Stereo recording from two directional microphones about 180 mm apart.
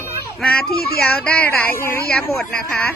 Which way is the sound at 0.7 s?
60° left (ahead or behind).